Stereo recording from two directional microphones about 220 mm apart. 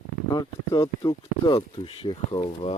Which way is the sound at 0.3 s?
15° left (ahead or behind).